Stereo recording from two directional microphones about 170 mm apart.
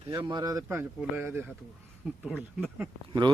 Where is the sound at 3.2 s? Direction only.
30° right (ahead or behind).